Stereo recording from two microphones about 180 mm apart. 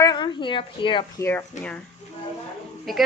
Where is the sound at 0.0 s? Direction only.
25° left (ahead or behind).